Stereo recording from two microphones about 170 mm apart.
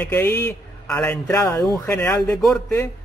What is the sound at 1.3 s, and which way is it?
Speech, 15° left (ahead or behind).